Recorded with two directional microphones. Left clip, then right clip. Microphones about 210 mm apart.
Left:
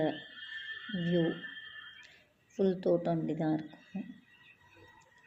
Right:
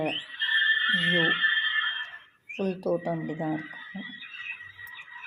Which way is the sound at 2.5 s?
15° right (ahead or behind).